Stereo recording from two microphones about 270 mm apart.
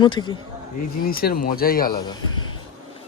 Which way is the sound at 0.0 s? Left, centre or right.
Centre.